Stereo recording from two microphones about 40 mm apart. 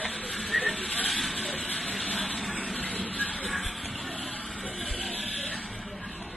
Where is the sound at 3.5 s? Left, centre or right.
Centre.